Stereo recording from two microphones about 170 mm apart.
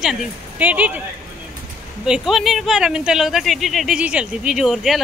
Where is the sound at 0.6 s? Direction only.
10° right (ahead or behind).